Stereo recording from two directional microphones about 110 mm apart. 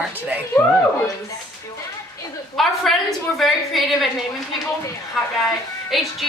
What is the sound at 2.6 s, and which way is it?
A woman's voice, 5° left (ahead or behind).